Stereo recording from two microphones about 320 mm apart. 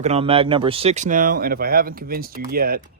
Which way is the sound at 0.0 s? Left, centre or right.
Centre.